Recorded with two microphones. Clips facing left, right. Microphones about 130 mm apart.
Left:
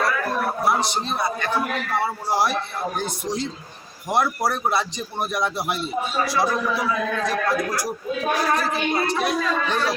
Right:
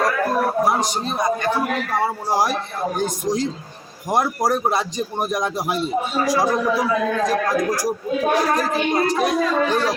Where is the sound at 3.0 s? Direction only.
45° right (ahead or behind).